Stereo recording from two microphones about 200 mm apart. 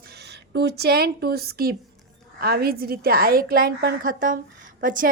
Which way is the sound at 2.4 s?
50° right (ahead or behind).